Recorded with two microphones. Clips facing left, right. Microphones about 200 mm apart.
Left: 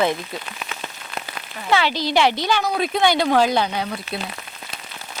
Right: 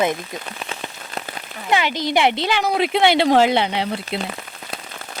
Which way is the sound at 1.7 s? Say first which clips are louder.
Even; 15° right (ahead or behind).